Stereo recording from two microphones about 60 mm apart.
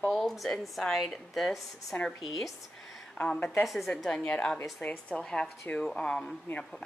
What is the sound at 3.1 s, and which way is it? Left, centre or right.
Speech, centre.